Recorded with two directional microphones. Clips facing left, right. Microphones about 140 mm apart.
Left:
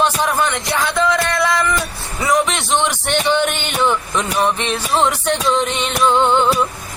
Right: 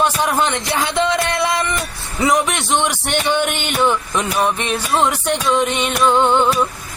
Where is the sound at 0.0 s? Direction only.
15° right (ahead or behind).